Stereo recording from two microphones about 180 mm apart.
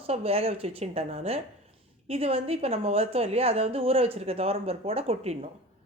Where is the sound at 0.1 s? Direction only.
35° right (ahead or behind).